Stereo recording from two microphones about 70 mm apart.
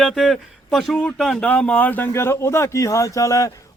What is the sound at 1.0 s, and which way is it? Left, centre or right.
Speech, centre.